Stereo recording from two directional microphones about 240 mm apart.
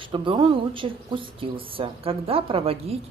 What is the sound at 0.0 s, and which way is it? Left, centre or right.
Speech, right.